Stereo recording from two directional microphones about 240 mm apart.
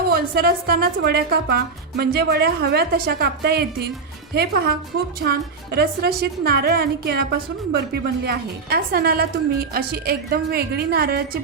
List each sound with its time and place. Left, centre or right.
0.1 s a woman's voice: right